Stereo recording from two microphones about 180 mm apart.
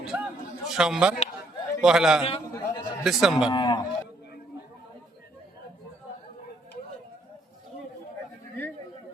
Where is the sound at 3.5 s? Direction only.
25° left (ahead or behind).